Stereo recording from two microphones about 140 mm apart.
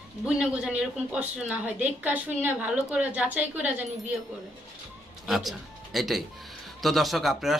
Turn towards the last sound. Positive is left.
turn(degrees=0)  # may be behind; listen again after turning